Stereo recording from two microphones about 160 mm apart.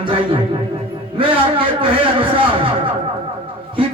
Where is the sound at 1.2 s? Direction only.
35° right (ahead or behind).